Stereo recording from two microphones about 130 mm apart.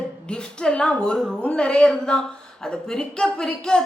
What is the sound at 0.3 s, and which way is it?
A woman's voice, 5° left (ahead or behind).